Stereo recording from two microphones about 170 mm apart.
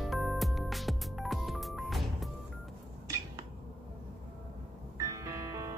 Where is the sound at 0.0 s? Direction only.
Centre (ahead or behind).